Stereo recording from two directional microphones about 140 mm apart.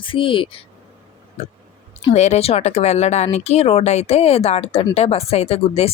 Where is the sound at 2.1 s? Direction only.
55° left (ahead or behind).